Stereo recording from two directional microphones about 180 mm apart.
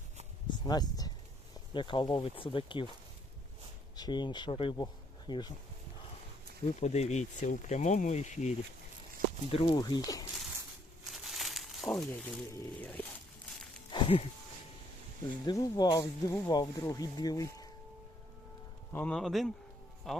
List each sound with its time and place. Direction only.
0.5 s speech: 25° left (ahead or behind)
3.9 s speech: 25° left (ahead or behind)
6.7 s speech: 40° left (ahead or behind); by 10.2 s 20° left (ahead or behind)
11.1 s crumpling: centre (ahead or behind)
13.9 s a sound: 30° left (ahead or behind)
15.4 s speech: 20° left (ahead or behind)
18.9 s speech: 5° left (ahead or behind)